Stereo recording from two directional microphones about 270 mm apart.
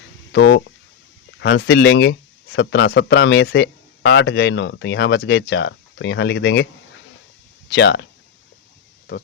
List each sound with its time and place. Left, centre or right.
0.3 s speech: left
7.7 s speech: left